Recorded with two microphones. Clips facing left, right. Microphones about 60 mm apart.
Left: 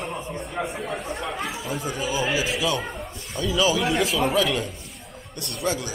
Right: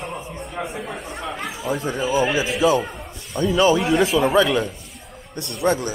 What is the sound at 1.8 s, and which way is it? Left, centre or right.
Speech, right.